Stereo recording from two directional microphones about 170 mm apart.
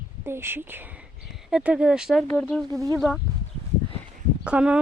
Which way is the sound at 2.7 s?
20° right (ahead or behind).